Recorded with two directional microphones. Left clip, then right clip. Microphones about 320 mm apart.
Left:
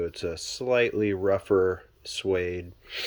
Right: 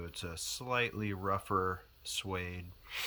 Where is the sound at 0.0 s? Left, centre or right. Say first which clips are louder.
Left 12 dB; centre.